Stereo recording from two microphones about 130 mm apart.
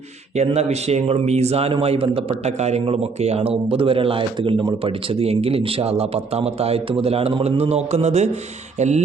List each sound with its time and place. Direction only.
0.3 s a man's voice: 55° right (ahead or behind)